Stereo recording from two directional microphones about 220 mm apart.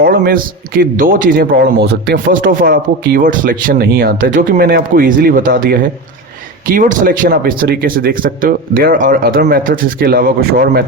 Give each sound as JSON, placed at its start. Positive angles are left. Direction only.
{"t": 0.0, "sound": "speech", "side_deg": -40}